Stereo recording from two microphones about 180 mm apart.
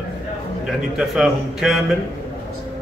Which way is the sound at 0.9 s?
5° right (ahead or behind).